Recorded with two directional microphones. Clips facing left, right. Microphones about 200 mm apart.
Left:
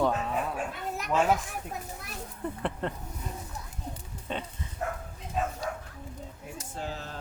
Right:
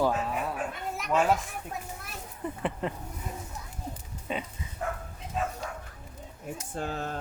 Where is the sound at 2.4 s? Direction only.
5° right (ahead or behind).